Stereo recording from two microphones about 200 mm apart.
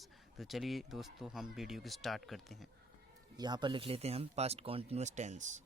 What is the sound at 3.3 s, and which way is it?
Speech, 20° right (ahead or behind).